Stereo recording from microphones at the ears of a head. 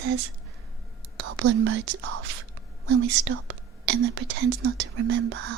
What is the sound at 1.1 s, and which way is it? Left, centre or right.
Speech, right.